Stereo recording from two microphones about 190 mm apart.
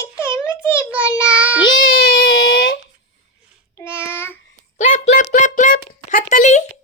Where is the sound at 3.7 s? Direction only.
15° left (ahead or behind).